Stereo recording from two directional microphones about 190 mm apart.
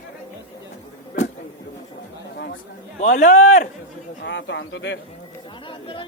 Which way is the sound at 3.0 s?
40° left (ahead or behind).